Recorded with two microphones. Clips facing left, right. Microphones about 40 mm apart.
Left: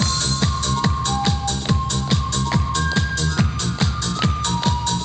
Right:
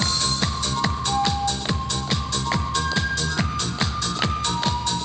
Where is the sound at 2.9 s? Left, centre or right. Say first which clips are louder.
Left 2 dB; centre.